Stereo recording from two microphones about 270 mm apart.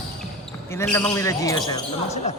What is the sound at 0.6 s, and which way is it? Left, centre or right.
Speech, centre.